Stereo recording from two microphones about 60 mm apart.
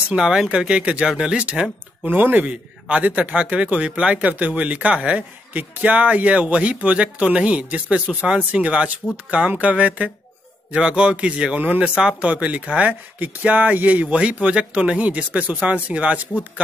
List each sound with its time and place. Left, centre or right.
0.1 s speech: centre
2.1 s speech: right
5.5 s speech: right
12.0 s speech: centre